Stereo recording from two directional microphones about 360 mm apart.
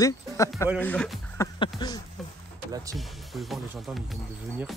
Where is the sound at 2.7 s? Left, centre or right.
Centre.